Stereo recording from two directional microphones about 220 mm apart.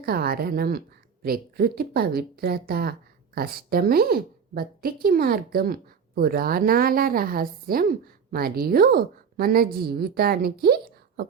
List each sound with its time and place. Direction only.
0.0 s speech: 45° right (ahead or behind)